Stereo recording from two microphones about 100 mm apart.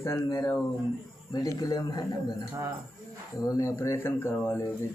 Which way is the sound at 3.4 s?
35° left (ahead or behind).